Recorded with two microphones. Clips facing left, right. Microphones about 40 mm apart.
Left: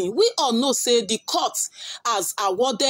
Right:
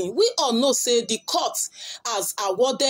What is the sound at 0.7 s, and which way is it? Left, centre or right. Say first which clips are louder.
Speech: left 2 dB; centre.